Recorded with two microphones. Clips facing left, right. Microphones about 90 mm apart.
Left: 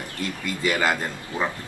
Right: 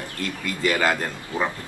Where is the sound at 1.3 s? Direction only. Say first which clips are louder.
Right 1 dB; 20° right (ahead or behind).